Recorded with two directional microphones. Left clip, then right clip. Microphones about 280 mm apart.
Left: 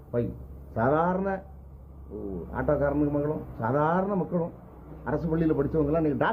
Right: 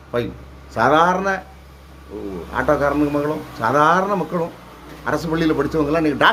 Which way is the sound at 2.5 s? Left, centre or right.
Centre.